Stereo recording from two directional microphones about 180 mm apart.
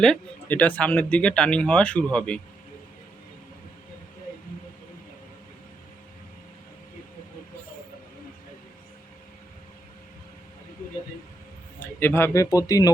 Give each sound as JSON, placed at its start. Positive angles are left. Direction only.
{"t": 0.0, "sound": "speech", "side_deg": 5}
{"t": 11.9, "sound": "speech", "side_deg": 10}